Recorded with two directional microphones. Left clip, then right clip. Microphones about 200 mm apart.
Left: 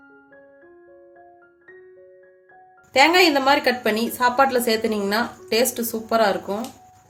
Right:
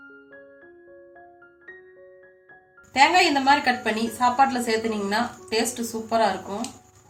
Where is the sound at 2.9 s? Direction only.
55° left (ahead or behind).